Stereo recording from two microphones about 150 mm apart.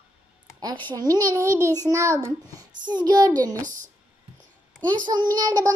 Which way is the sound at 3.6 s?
60° right (ahead or behind).